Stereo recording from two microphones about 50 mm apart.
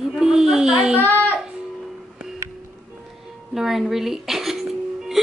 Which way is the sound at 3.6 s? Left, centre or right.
Centre.